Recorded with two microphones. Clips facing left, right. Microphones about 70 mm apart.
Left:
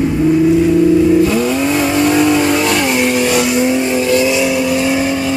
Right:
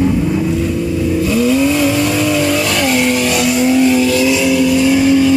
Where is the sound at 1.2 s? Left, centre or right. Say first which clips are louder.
Right 1 dB; left.